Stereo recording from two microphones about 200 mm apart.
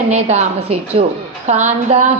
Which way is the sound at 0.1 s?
35° right (ahead or behind).